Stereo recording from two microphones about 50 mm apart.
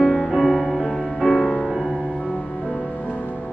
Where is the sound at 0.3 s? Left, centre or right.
Centre.